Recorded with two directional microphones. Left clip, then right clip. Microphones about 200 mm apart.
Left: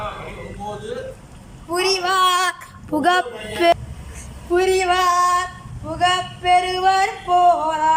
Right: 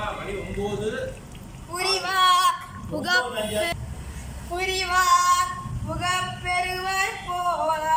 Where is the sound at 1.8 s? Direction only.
50° left (ahead or behind).